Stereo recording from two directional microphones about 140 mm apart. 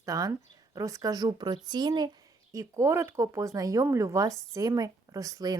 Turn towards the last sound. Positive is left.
turn(degrees=-25)  # may be behind; listen again after turning